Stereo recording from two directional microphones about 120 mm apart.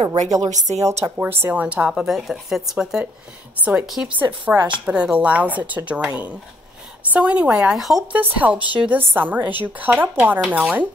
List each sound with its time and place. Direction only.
0.0 s speech: 70° right (ahead or behind)
0.5 s speech: 80° right
1.1 s a woman's voice: 15° right (ahead or behind)
4.2 s a woman's voice: 15° right (ahead or behind)
8.1 s a woman's voice: 15° right (ahead or behind)